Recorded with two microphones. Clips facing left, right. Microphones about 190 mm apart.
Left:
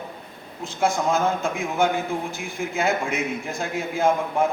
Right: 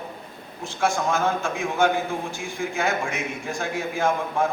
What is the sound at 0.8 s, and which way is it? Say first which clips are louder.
Speech: left 2 dB; 20° left (ahead or behind).